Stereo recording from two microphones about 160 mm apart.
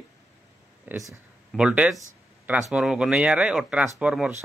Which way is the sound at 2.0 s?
15° right (ahead or behind).